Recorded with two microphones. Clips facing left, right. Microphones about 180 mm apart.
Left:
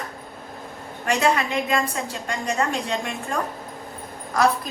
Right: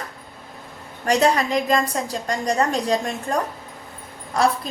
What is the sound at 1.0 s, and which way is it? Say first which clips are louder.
A woman's voice: right 3 dB; 35° right (ahead or behind).